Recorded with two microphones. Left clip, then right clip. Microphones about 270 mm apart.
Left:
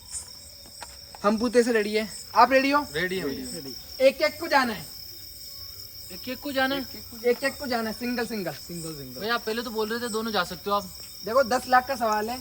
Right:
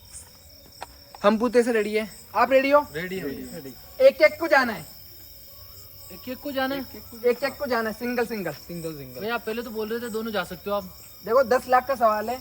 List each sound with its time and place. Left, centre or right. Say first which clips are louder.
1.4 s speech: right 1 dB; centre
2.9 s speech: left 3 dB; centre
3.9 s speech: right 5 dB; centre
6.2 s speech: left 1 dB; centre
9.2 s speech: left 1 dB; centre
11.3 s speech: right 2 dB; centre